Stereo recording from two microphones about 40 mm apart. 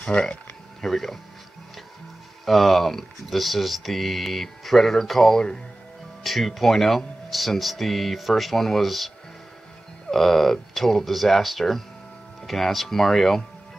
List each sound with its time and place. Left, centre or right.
0.0 s speech: left
0.7 s speech: centre
2.4 s speech: centre
10.1 s speech: centre